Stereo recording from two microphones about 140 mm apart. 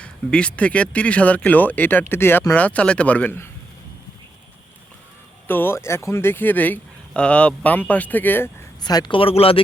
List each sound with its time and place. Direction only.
0.0 s speech: 5° left (ahead or behind)
5.5 s speech: 15° left (ahead or behind)
8.8 s speech: 30° left (ahead or behind)